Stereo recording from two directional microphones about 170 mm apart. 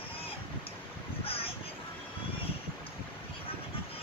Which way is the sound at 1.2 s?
35° left (ahead or behind).